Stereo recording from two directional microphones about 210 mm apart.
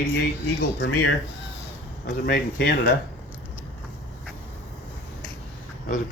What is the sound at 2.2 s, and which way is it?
Speech, 50° left (ahead or behind).